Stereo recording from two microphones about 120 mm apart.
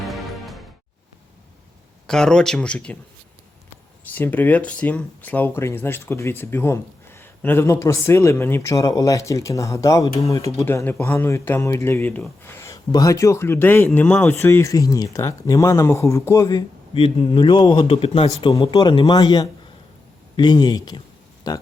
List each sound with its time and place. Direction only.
0.0 s music: centre (ahead or behind)
2.0 s speech: 5° left (ahead or behind)
4.1 s speech: 15° left (ahead or behind)
12.4 s a sound: 20° left (ahead or behind)
12.9 s speech: 30° left (ahead or behind)
16.9 s speech: 50° left (ahead or behind)
17.8 s speech: 50° left (ahead or behind)
18.6 s speech: 40° left (ahead or behind)